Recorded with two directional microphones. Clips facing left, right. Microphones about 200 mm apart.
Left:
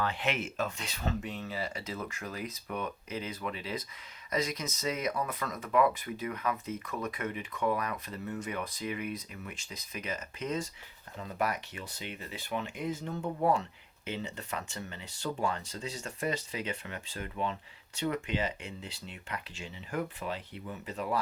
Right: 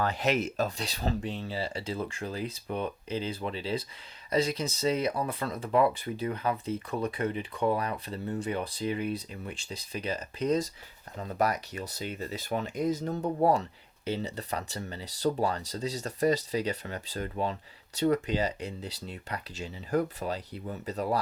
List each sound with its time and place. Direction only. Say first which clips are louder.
0.0 s speech: right 5 dB; 40° right (ahead or behind)